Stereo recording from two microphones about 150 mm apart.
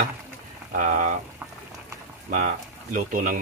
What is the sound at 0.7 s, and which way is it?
Speech, 60° right (ahead or behind).